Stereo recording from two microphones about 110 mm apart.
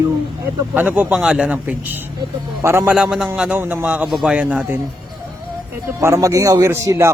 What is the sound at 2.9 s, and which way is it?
A man's voice, 5° right (ahead or behind).